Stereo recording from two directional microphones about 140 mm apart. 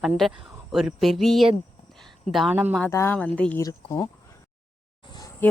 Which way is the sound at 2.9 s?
15° left (ahead or behind).